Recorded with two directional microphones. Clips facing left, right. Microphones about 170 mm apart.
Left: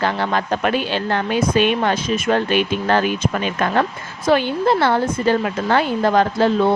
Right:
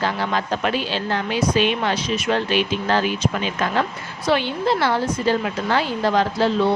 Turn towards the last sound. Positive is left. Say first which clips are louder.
# left 3 dB
turn(degrees=50)  # may be behind; listen again after turning